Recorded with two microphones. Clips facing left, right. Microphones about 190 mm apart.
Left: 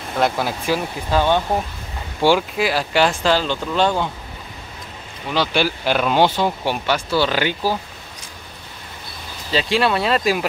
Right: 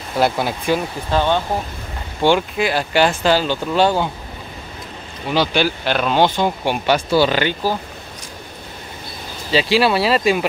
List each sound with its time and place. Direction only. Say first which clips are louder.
0.2 s speech: right 2 dB; centre (ahead or behind)
2.2 s speech: right 1 dB; 5° left (ahead or behind)
5.3 s speech: right 2 dB; 5° left (ahead or behind)
6.9 s speech: right 5 dB; 15° right (ahead or behind)
7.2 s speech: right 2 dB; 5° left (ahead or behind)
9.5 s speech: right 3 dB; 5° right (ahead or behind)